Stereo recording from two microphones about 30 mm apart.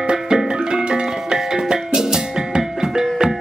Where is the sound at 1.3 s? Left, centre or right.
Right.